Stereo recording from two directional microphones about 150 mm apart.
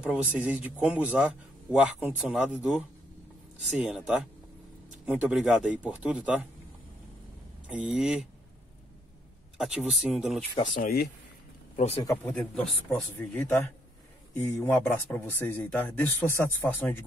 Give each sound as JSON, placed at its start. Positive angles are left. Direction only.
{"t": 0.0, "sound": "a man's voice", "side_deg": -10}
{"t": 7.6, "sound": "speech", "side_deg": -5}
{"t": 9.6, "sound": "speech", "side_deg": 0}
{"t": 10.7, "sound": "speech", "side_deg": 80}
{"t": 11.7, "sound": "speech", "side_deg": 50}
{"t": 12.0, "sound": "speech", "side_deg": 20}
{"t": 12.3, "sound": "speech", "side_deg": 5}
{"t": 15.1, "sound": "speech", "side_deg": 10}